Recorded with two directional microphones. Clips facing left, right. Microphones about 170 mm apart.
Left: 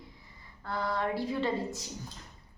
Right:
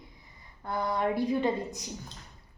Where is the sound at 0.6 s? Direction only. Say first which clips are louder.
Right 3 dB; 20° right (ahead or behind).